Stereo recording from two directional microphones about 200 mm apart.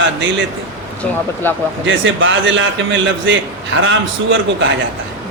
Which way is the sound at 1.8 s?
70° right (ahead or behind).